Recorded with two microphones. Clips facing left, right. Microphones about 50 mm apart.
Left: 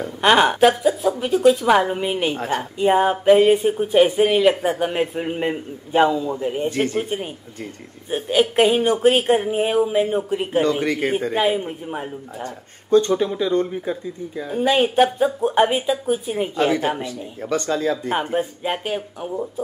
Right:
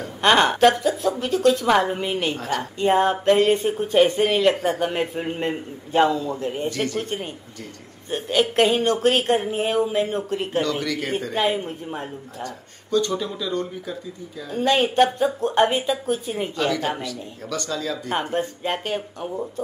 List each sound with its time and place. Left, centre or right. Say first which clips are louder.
0.2 s speech: left 1 dB; centre
2.3 s speech: left 3 dB; left
2.8 s speech: left 2 dB; centre
6.7 s speech: left 4 dB; left
7.0 s speech: left 3 dB; centre
10.6 s speech: left 5 dB; left
11.3 s speech: left 3 dB; centre
12.4 s speech: left 2 dB; left
14.5 s speech: left 2 dB; centre
16.5 s speech: left 4 dB; left
18.3 s speech: left 2 dB; centre